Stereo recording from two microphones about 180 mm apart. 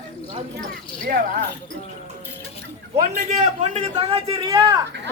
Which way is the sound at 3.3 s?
35° right (ahead or behind).